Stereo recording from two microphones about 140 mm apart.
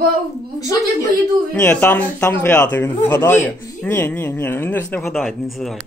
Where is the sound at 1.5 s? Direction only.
10° left (ahead or behind).